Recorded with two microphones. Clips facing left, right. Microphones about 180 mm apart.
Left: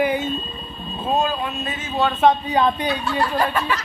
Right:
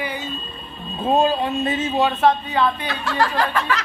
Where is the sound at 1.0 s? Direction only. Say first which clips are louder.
Right 4 dB; 30° right (ahead or behind).